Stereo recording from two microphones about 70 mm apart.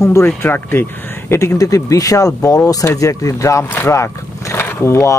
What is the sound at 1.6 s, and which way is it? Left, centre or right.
Speech, left.